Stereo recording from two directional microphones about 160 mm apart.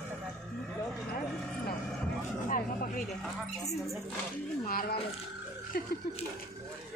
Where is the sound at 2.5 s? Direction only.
60° left (ahead or behind).